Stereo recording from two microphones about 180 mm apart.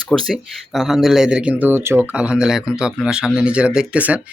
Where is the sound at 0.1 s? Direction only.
5° left (ahead or behind).